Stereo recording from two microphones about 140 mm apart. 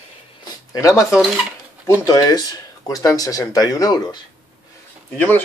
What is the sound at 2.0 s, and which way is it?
Speech, 25° left (ahead or behind).